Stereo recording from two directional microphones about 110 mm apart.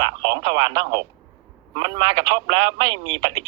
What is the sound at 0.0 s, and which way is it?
Speech, 45° right (ahead or behind).